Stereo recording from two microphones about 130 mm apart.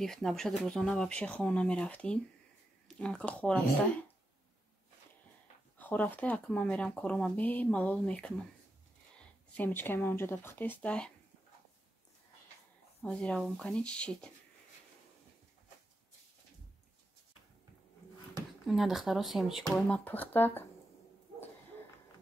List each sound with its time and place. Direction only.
0.0 s speech: 5° left (ahead or behind)
5.8 s speech: 15° left (ahead or behind)
13.0 s speech: 10° left (ahead or behind)
18.7 s speech: centre (ahead or behind)
19.7 s speech: 10° left (ahead or behind)